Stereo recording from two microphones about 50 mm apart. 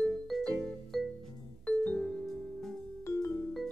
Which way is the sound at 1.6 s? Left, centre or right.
Left.